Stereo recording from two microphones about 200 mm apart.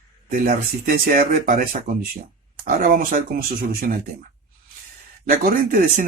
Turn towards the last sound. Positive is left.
turn(degrees=-45)  # may be behind; listen again after turning